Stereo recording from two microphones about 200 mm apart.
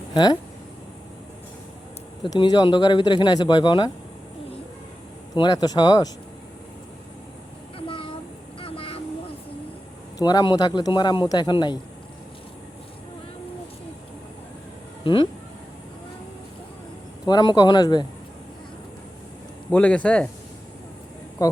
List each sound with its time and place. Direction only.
0.1 s speech: 20° left (ahead or behind)
2.2 s speech: 20° left (ahead or behind)
5.3 s speech: 20° left (ahead or behind)
7.8 s a sound: 25° left (ahead or behind)
8.6 s vehicle: 25° left (ahead or behind)
10.2 s speech: 20° left (ahead or behind)
15.0 s speech: 25° left (ahead or behind)
17.2 s speech: 20° left (ahead or behind)
19.7 s speech: 5° left (ahead or behind)
21.4 s a woman's voice: 15° left (ahead or behind)